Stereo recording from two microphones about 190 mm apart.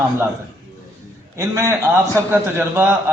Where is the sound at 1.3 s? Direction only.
15° right (ahead or behind).